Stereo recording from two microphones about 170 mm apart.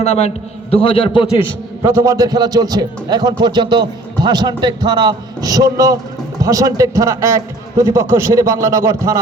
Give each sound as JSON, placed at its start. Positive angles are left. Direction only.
{"t": 0.0, "sound": "a man's voice", "side_deg": 40}
{"t": 1.8, "sound": "a man's voice", "side_deg": -20}